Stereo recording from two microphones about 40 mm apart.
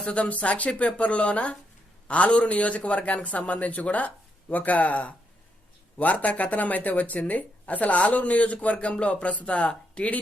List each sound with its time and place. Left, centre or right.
0.0 s speech: left